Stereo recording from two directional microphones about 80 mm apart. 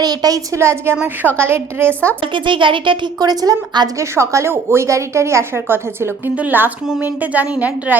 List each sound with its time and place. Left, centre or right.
0.0 s a woman's voice: right
0.5 s a woman's voice: right
1.9 s a woman's voice: centre
2.2 s speech: right
3.2 s a woman's voice: right
4.1 s a woman's voice: right; by 7.9 s centre